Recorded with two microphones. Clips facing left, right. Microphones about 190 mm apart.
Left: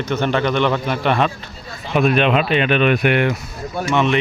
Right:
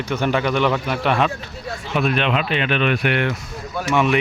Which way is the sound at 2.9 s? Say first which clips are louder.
Left 4 dB; 15° left (ahead or behind).